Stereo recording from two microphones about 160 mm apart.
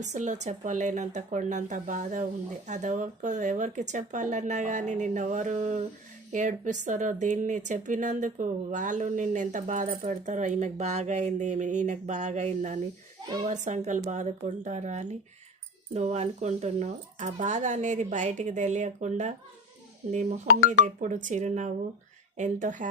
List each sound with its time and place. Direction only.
0.0 s speech: 50° right (ahead or behind)